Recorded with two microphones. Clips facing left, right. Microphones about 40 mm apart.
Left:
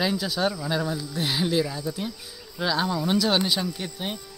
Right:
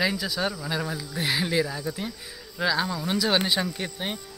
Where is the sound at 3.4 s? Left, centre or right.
Right.